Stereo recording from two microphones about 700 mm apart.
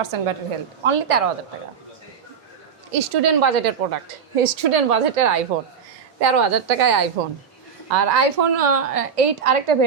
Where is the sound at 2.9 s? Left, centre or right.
Right.